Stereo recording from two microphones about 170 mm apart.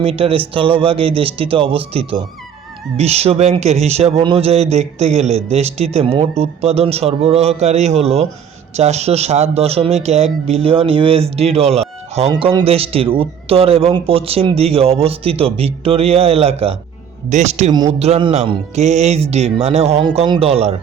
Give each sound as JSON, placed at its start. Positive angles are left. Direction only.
{"t": 0.0, "sound": "speech", "side_deg": -35}
{"t": 17.7, "sound": "speech", "side_deg": -25}
{"t": 18.0, "sound": "speech", "side_deg": -35}
{"t": 20.1, "sound": "speech", "side_deg": -25}